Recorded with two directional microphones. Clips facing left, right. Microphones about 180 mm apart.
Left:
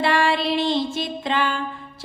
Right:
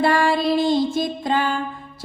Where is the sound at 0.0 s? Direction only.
45° right (ahead or behind).